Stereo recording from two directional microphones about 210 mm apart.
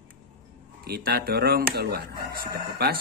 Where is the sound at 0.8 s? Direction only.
45° right (ahead or behind).